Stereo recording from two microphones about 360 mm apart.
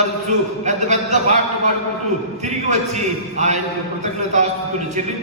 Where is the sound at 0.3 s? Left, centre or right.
Centre.